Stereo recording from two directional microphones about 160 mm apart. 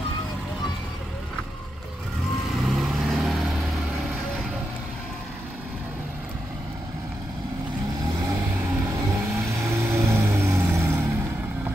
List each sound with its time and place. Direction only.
2.5 s vehicle: centre (ahead or behind)
8.0 s vehicle: 20° right (ahead or behind)